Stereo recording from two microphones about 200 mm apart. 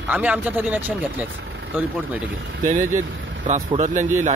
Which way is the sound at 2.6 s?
40° right (ahead or behind).